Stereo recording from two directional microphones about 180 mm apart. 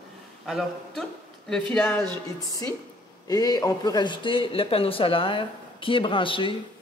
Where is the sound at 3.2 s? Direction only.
20° left (ahead or behind).